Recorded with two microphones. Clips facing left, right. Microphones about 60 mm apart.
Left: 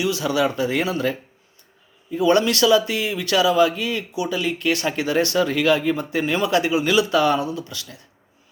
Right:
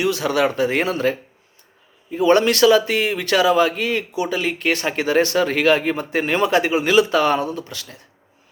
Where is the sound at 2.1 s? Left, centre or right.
Right.